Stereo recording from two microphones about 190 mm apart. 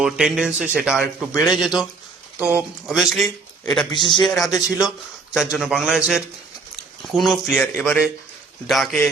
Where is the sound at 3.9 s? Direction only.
25° left (ahead or behind).